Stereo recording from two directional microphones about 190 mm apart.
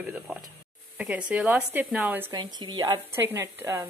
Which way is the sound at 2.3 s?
20° right (ahead or behind).